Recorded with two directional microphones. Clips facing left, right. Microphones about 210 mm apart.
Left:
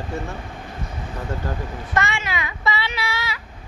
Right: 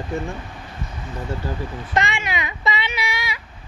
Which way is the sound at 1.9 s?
15° right (ahead or behind).